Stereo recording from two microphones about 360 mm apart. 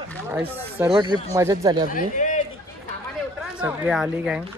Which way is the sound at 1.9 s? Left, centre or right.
Left.